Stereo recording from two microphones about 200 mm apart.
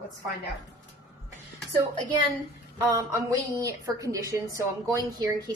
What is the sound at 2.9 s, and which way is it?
A woman's voice, 15° right (ahead or behind).